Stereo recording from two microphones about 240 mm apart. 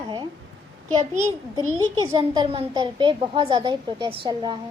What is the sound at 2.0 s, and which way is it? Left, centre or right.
A child's voice, centre.